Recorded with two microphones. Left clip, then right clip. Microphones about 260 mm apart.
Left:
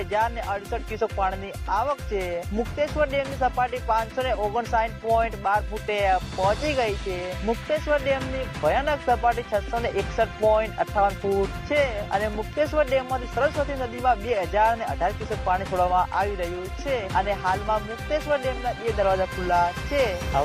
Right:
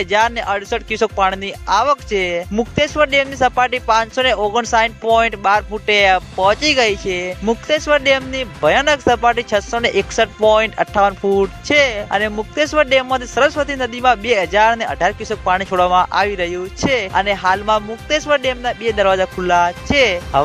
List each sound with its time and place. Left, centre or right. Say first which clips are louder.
0.0 s speech: right 10 dB; right